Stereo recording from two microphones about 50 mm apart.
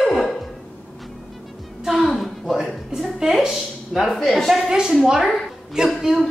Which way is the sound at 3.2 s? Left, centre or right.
Centre.